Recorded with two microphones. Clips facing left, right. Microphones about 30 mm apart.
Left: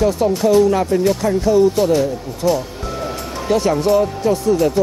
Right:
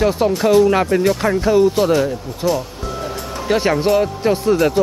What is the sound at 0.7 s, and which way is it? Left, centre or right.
Speech, right.